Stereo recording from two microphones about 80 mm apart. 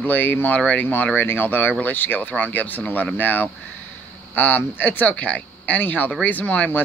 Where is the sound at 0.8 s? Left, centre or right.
Left.